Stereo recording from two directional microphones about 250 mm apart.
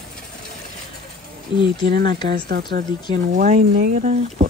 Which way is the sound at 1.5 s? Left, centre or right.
Centre.